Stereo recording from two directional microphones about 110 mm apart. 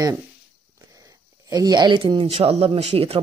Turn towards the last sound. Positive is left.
turn(degrees=-65)  # may be behind; listen again after turning